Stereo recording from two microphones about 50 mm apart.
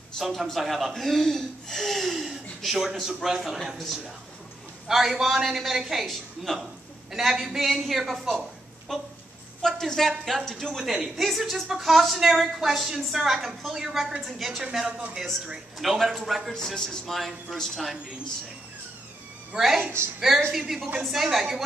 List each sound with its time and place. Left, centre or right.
0.2 s a woman's voice: centre
10.7 s speech: centre
15.8 s speech: centre
16.5 s speech: centre
17.0 s speech: centre
19.6 s speech: centre